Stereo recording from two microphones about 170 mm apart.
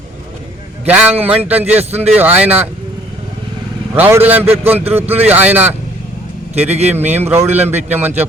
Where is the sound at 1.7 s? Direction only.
40° right (ahead or behind).